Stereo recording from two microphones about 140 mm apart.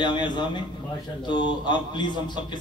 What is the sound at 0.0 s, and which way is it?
A man's voice, 30° left (ahead or behind).